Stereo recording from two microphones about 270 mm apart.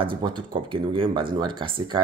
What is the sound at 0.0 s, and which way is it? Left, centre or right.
Speech, centre.